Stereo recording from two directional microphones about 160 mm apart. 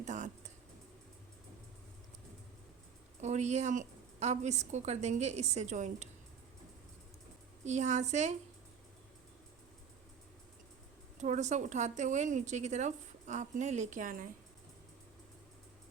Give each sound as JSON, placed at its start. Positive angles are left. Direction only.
{"t": 0.0, "sound": "a sound", "side_deg": -50}
{"t": 3.2, "sound": "a woman's voice", "side_deg": -45}
{"t": 7.6, "sound": "a woman's voice", "side_deg": -45}
{"t": 11.2, "sound": "a woman's voice", "side_deg": -50}